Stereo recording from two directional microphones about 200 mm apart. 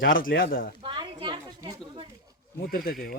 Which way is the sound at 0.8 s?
25° right (ahead or behind).